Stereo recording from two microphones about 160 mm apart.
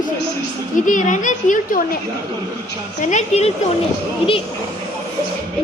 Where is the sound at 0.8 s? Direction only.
55° left (ahead or behind).